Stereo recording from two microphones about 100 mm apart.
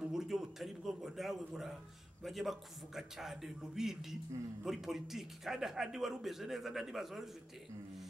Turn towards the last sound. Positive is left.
turn(degrees=0)  # may be behind; listen again after turning